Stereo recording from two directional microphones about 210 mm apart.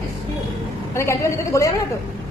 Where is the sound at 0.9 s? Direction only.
15° left (ahead or behind).